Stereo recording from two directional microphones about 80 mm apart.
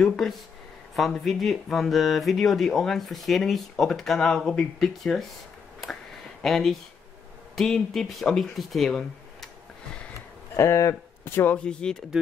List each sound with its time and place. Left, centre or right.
0.0 s speech: centre
6.4 s speech: centre
10.5 s speech: left
11.2 s speech: left
11.5 s speech: centre